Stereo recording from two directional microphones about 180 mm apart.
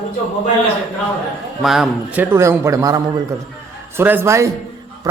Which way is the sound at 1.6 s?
Centre (ahead or behind).